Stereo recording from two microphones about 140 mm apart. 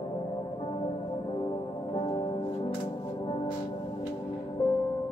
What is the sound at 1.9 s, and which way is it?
Music, 35° left (ahead or behind).